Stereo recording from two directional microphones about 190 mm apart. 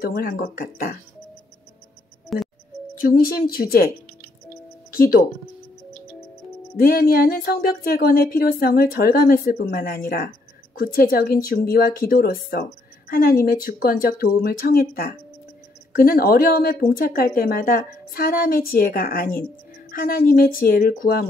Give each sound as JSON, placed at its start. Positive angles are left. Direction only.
{"t": 0.0, "sound": "speech", "side_deg": 50}
{"t": 2.2, "sound": "music", "side_deg": 0}
{"t": 3.0, "sound": "speech", "side_deg": 50}
{"t": 4.9, "sound": "speech", "side_deg": 50}
{"t": 6.8, "sound": "speech", "side_deg": 50}